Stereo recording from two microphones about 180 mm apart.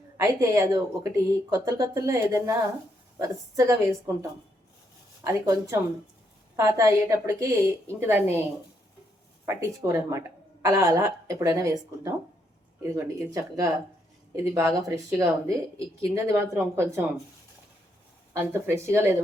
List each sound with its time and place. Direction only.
0.2 s a woman's voice: 15° right (ahead or behind)
9.5 s a woman's voice: 15° right (ahead or behind)
18.3 s a woman's voice: 15° right (ahead or behind)